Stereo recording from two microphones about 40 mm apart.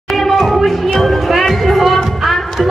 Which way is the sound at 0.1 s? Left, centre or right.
Centre.